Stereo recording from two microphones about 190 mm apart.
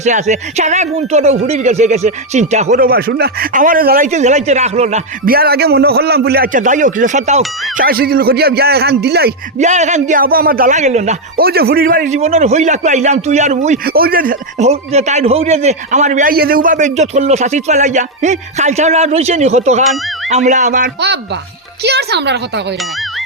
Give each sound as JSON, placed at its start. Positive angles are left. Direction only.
{"t": 0.0, "sound": "a man's voice", "side_deg": -40}
{"t": 5.2, "sound": "a man's voice", "side_deg": -55}
{"t": 7.9, "sound": "speech", "side_deg": -55}
{"t": 9.6, "sound": "a man's voice", "side_deg": -40}
{"t": 11.3, "sound": "a man's voice", "side_deg": -55}
{"t": 13.8, "sound": "a man's voice", "side_deg": -50}
{"t": 14.7, "sound": "a man's voice", "side_deg": -35}
{"t": 21.8, "sound": "speech", "side_deg": -60}